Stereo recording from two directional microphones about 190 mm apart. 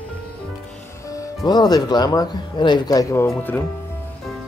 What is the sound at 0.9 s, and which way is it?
Music, 15° left (ahead or behind).